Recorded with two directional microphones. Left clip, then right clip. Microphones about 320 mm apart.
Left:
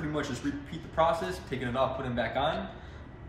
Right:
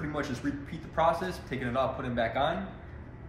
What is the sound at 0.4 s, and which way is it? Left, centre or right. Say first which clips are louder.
Speech: even; centre.